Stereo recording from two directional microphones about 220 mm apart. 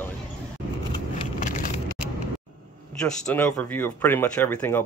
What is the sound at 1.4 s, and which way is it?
Vehicle, 35° left (ahead or behind).